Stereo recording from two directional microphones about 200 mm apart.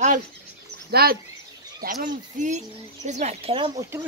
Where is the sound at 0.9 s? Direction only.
50° right (ahead or behind); by 3.7 s 30° right (ahead or behind).